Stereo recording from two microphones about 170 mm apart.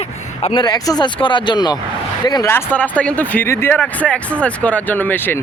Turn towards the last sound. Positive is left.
turn(degrees=10)  # may be behind; listen again after turning